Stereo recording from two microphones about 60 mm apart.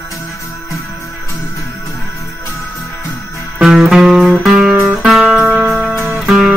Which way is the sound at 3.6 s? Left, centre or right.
Centre.